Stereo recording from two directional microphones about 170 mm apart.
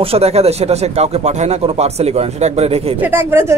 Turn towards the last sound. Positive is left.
turn(degrees=-15)  # may be behind; listen again after turning